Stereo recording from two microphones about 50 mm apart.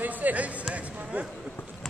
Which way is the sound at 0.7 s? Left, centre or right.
Right.